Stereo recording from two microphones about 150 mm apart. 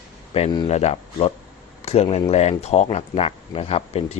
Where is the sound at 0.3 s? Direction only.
40° left (ahead or behind).